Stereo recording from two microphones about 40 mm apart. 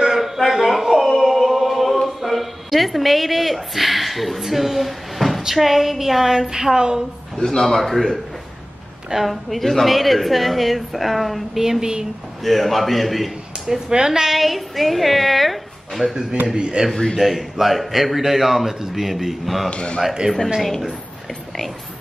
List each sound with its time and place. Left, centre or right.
0.2 s a sound: centre
5.4 s a woman's voice: centre
7.3 s a man's voice: centre
7.6 s a woman's voice: centre
9.1 s a woman's voice: centre
11.6 s a woman's voice: centre
12.4 s a woman's voice: centre
13.7 s a woman's voice: centre
14.2 s a woman's voice: centre
16.4 s a man's voice: right
17.2 s a woman's voice: centre
19.7 s speech: left